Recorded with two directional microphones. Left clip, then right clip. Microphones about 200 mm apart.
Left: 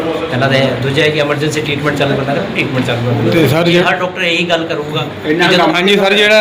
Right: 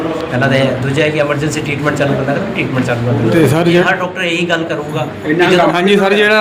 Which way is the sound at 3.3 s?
10° right (ahead or behind).